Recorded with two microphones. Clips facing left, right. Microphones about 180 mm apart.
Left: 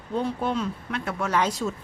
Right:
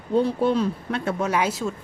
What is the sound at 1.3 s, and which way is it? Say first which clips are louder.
Speech: left 2 dB; 10° right (ahead or behind).